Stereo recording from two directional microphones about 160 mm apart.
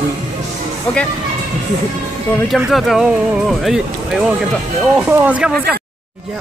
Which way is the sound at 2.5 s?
Centre (ahead or behind).